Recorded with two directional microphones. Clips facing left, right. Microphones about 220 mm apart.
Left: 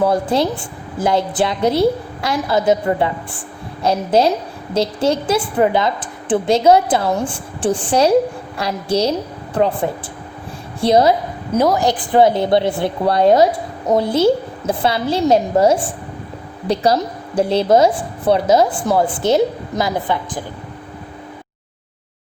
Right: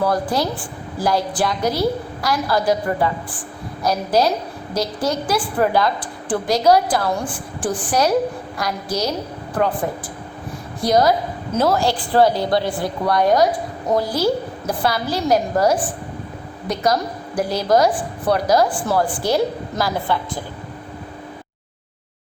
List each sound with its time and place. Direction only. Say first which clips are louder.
0.0 s a woman's voice: left 4 dB; 25° left (ahead or behind)
10.8 s a woman's voice: left 3 dB; 25° left (ahead or behind)
11.5 s a woman's voice: left 3 dB; 15° left (ahead or behind)